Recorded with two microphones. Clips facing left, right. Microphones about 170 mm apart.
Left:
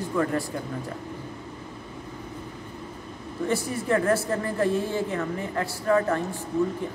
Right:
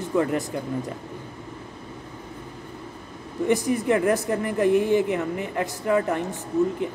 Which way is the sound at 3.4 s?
15° right (ahead or behind).